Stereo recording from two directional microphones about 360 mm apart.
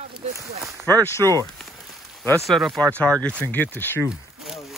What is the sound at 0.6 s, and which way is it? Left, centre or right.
Speech, centre.